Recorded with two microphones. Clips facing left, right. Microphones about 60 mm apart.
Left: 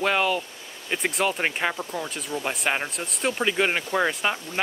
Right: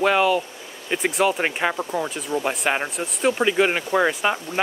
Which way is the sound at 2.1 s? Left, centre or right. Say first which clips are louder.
Right 5 dB; centre.